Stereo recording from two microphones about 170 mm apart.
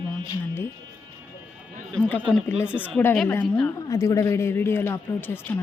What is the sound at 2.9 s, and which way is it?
Speech, 10° left (ahead or behind).